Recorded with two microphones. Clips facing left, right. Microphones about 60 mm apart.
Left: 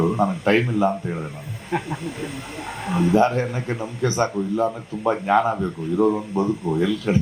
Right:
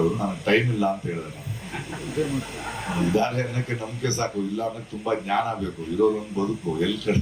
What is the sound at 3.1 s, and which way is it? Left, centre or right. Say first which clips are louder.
A man's voice: left 6 dB; left.